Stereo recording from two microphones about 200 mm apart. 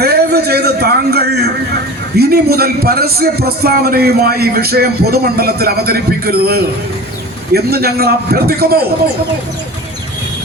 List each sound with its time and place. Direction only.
0.0 s a man's voice: 50° right (ahead or behind)